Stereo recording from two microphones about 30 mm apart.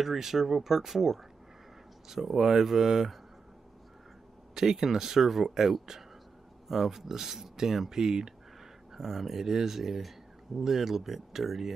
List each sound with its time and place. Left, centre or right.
0.0 s speech: centre
4.6 s speech: centre